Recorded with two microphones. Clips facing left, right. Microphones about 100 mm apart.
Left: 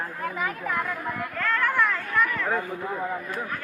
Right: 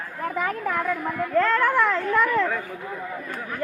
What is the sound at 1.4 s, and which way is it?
A woman's voice, 30° right (ahead or behind).